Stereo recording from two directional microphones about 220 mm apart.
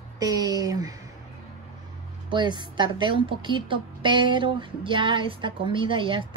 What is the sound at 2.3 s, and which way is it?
A woman's voice, 20° right (ahead or behind).